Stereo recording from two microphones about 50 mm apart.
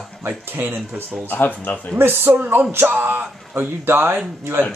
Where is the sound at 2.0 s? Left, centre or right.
Right.